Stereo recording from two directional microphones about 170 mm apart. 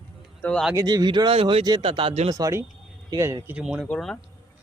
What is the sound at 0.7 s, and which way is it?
A man's voice, 20° right (ahead or behind).